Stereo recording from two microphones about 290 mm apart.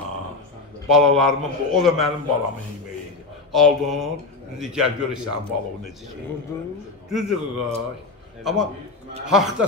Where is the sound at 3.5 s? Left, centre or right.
Centre.